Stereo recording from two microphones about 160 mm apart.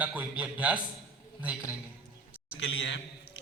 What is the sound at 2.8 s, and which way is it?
Speech, 90° left.